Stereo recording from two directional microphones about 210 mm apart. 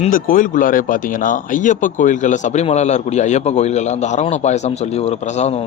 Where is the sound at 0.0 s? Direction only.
40° left (ahead or behind).